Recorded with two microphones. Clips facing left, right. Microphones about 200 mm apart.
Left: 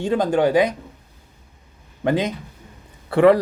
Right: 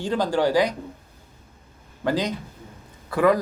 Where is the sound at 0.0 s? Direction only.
20° left (ahead or behind).